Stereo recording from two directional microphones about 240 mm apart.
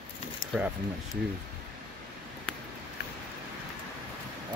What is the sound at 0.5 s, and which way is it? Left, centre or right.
Speech, centre.